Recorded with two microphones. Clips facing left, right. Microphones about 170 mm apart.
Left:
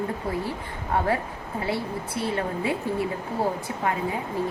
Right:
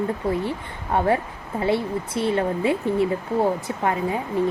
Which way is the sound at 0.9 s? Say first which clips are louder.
Right 4 dB; 25° right (ahead or behind).